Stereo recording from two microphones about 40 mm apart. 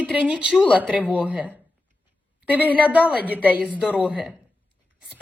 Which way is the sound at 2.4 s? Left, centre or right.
Right.